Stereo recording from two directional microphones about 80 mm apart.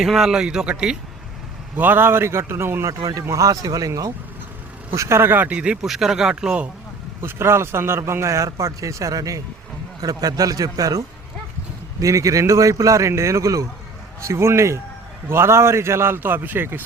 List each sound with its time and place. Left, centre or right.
0.0 s speech: centre
1.7 s a man's voice: right
2.8 s a man's voice: right
4.9 s a man's voice: right; by 6.7 s centre
7.2 s a man's voice: right